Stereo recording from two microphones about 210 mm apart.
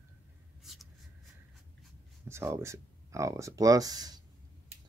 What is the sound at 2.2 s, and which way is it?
Speech, 10° right (ahead or behind).